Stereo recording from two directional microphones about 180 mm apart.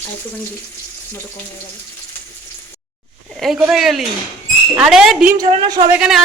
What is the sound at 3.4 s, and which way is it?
A woman's voice, centre (ahead or behind).